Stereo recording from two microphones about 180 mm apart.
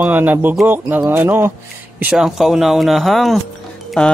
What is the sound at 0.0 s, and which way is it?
Speech, 10° right (ahead or behind).